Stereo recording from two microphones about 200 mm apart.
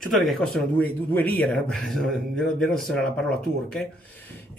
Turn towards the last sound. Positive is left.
turn(degrees=5)  # may be behind; listen again after turning